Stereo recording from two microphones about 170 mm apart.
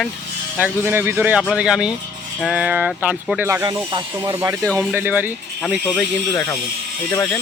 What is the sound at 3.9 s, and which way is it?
A man's voice, 25° right (ahead or behind).